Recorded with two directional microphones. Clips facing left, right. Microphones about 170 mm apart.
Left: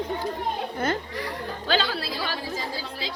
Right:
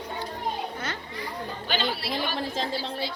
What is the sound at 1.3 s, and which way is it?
Chatter, 90° left.